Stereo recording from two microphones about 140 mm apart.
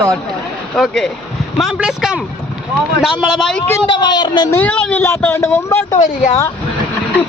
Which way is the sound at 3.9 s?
30° left (ahead or behind).